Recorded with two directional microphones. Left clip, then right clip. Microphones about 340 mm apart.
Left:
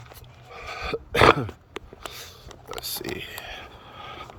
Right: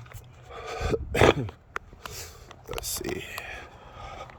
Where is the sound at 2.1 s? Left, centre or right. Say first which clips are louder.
Left 2 dB; centre.